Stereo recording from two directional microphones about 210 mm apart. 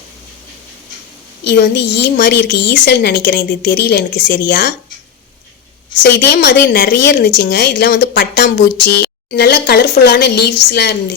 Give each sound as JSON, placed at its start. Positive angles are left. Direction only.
{"t": 1.5, "sound": "a woman's voice", "side_deg": 50}
{"t": 6.1, "sound": "a woman's voice", "side_deg": 55}